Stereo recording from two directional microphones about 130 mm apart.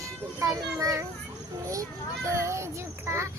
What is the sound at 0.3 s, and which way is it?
Speech, 25° right (ahead or behind).